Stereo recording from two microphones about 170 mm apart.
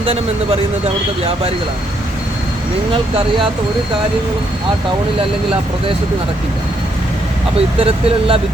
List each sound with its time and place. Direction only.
0.0 s speech: 35° right (ahead or behind)
7.8 s speech: 35° right (ahead or behind)